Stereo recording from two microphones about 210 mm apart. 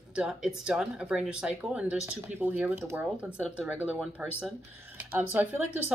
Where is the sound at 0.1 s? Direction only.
5° right (ahead or behind).